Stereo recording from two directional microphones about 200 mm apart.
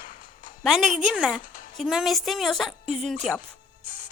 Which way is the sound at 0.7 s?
Centre (ahead or behind).